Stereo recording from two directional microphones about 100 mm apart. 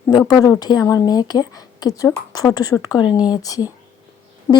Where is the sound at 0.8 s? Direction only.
30° left (ahead or behind).